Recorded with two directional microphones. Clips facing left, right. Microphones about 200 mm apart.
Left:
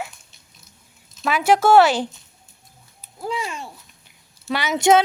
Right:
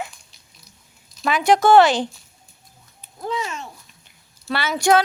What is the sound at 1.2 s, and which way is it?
Speech, 5° left (ahead or behind).